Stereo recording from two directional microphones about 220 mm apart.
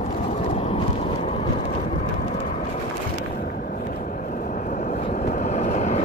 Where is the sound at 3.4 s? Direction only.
40° left (ahead or behind).